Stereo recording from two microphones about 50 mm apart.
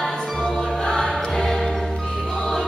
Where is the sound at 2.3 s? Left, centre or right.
Centre.